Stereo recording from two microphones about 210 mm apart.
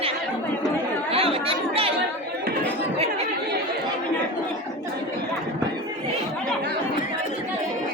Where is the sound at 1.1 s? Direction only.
25° right (ahead or behind).